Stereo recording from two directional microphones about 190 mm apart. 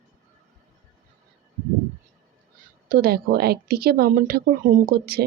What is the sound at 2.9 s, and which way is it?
Speech, 50° right (ahead or behind).